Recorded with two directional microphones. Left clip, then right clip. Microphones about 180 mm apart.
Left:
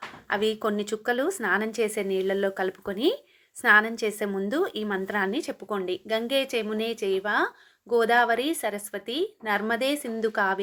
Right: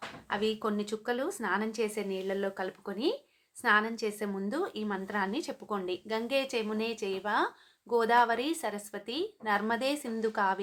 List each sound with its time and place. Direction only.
0.3 s a woman's voice: 35° left (ahead or behind)